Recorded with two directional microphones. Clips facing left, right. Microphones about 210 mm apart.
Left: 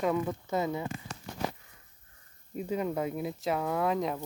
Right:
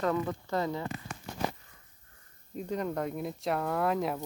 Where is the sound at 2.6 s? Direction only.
5° left (ahead or behind).